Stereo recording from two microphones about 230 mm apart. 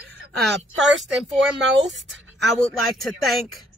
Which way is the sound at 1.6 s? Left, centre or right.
Right.